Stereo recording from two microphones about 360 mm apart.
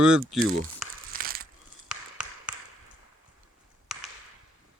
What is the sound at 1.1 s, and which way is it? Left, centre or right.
Ratchet, right.